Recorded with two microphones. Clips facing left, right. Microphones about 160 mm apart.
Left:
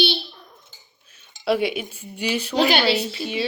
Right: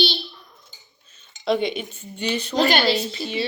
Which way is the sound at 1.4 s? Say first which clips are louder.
Left 1 dB; 5° left (ahead or behind).